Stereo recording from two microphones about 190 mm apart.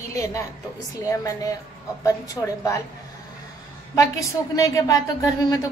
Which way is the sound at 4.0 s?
15° left (ahead or behind).